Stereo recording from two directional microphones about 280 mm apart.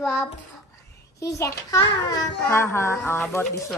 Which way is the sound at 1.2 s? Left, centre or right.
Centre.